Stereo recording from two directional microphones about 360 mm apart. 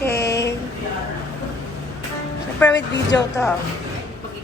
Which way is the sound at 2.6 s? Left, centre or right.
Centre.